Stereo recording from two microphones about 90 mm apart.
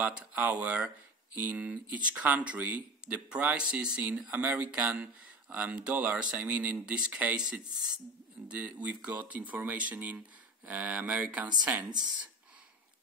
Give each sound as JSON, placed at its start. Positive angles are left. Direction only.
{"t": 0.0, "sound": "speech", "side_deg": -15}
{"t": 11.9, "sound": "speech", "side_deg": -50}